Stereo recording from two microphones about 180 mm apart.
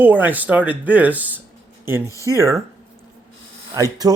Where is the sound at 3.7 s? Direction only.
20° right (ahead or behind).